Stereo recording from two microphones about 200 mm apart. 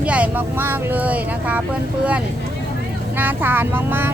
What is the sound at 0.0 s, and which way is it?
Speech, 5° right (ahead or behind).